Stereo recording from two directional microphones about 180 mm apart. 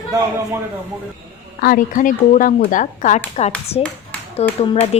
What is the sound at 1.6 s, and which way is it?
Speech, 50° left (ahead or behind).